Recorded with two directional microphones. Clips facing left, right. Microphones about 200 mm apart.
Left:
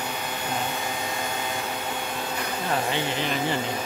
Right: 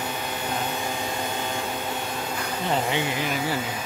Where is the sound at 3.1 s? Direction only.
10° right (ahead or behind).